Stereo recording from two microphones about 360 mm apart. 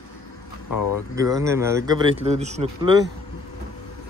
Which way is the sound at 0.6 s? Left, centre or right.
Left.